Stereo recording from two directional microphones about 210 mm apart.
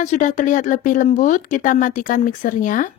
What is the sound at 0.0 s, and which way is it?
Speech, 35° left (ahead or behind).